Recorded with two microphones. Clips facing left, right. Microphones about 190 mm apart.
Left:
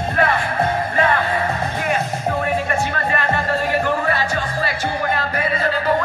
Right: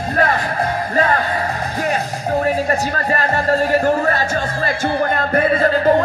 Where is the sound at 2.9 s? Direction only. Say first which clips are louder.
Right 2 dB; 40° right (ahead or behind).